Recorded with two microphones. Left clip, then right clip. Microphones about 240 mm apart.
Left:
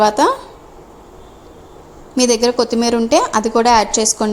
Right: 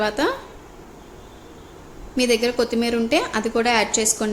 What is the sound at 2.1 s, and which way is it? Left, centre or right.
A woman's voice, left.